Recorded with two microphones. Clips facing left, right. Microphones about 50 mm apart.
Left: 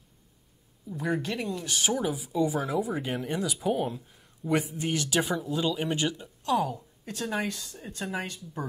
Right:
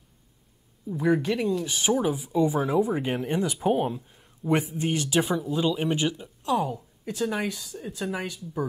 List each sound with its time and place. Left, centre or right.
0.8 s speech: centre
1.4 s speech: centre
1.7 s speech: centre
3.6 s speech: centre
6.7 s a woman's voice: centre
7.8 s speech: centre